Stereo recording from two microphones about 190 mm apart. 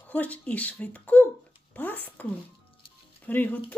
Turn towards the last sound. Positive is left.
turn(degrees=10)  # may be behind; listen again after turning